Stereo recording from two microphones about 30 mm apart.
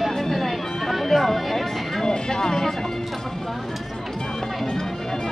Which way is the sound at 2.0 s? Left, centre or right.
Centre.